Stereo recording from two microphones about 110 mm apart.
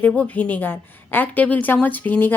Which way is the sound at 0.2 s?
15° left (ahead or behind).